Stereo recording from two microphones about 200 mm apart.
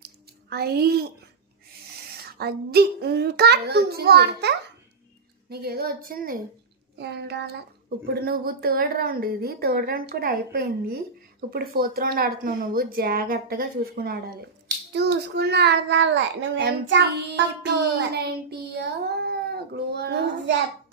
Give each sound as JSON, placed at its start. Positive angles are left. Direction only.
{"t": 0.0, "sound": "a sound", "side_deg": -50}
{"t": 2.1, "sound": "a woman's voice", "side_deg": -50}
{"t": 7.0, "sound": "a child's voice", "side_deg": -55}